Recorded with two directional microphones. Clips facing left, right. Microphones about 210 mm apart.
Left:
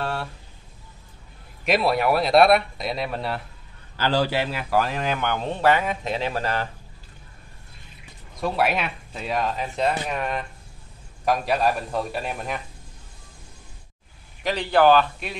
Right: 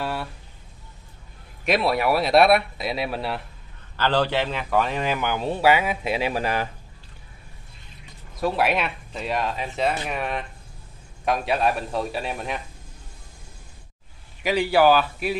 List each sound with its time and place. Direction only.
0.0 s a sound: 5° right (ahead or behind)
1.6 s a man's voice: centre (ahead or behind)
3.9 s a man's voice: 10° left (ahead or behind); by 6.7 s 10° right (ahead or behind)
8.4 s a man's voice: centre (ahead or behind)
14.4 s a man's voice: 10° right (ahead or behind)